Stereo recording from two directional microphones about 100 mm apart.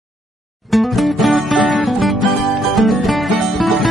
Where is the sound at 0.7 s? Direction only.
Centre (ahead or behind).